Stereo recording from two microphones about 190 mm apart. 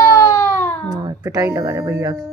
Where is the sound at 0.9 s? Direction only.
20° right (ahead or behind).